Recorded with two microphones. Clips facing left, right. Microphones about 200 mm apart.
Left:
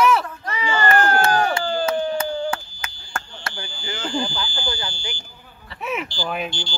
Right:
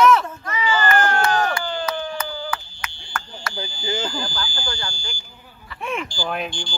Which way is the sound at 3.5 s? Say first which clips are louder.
Right 4 dB; 40° right (ahead or behind).